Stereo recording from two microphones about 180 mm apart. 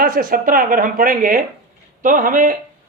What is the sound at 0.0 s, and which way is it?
Speech, 50° right (ahead or behind).